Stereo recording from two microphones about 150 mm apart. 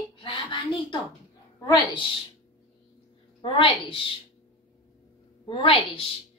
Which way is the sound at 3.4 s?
35° left (ahead or behind).